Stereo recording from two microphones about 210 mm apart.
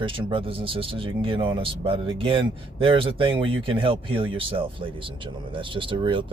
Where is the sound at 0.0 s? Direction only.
25° right (ahead or behind).